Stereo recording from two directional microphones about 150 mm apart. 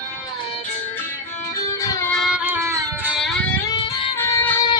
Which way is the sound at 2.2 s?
5° right (ahead or behind).